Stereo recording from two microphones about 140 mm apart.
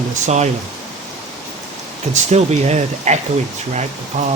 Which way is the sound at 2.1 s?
55° right (ahead or behind).